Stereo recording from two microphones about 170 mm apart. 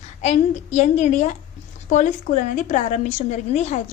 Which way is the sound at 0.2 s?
45° left (ahead or behind).